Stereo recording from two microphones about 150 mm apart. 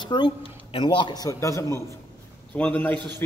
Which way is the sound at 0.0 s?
30° left (ahead or behind).